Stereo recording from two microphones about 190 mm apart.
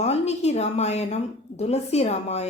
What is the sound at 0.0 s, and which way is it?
A woman's voice, 35° left (ahead or behind).